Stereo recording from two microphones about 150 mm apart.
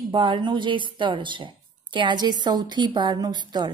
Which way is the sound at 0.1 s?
30° right (ahead or behind).